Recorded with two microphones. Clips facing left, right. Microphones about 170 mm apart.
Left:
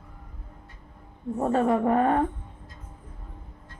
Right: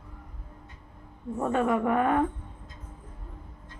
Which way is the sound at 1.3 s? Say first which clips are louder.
Left 3 dB; 35° left (ahead or behind).